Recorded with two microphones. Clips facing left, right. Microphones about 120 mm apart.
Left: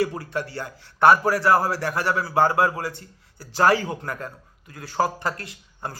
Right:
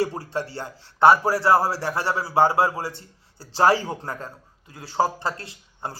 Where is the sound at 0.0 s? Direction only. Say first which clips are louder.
Even; 30° right (ahead or behind).